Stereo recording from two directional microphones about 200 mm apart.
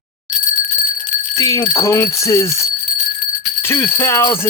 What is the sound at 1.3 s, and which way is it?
Speech, 15° left (ahead or behind).